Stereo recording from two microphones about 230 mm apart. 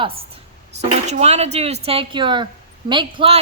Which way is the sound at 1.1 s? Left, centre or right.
Right.